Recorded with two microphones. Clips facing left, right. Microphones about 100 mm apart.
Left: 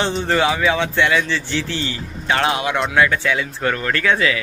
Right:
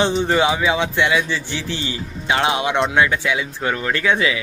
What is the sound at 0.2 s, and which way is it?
Speech, 15° right (ahead or behind).